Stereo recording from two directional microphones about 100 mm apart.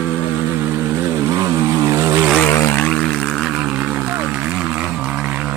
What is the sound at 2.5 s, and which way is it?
Aircraft, 30° left (ahead or behind).